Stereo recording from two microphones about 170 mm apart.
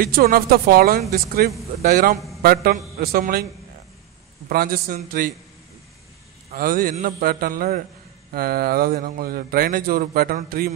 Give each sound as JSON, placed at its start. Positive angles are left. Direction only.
{"t": 0.0, "sound": "speech", "side_deg": -60}
{"t": 4.5, "sound": "speech", "side_deg": -65}
{"t": 6.5, "sound": "speech", "side_deg": -55}